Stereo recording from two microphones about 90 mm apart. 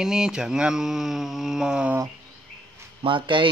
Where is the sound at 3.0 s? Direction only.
65° right (ahead or behind).